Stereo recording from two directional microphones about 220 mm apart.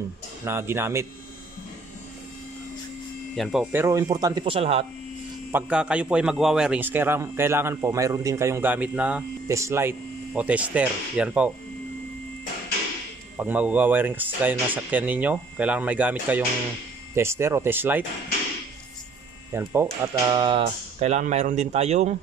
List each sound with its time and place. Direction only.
0.5 s a man's voice: 10° right (ahead or behind)
3.3 s speech: centre (ahead or behind)
3.7 s a man's voice: 15° right (ahead or behind)
5.5 s a man's voice: 5° right (ahead or behind)
13.4 s a man's voice: 5° right (ahead or behind)
19.5 s a man's voice: 10° right (ahead or behind); by 22.1 s 30° right (ahead or behind)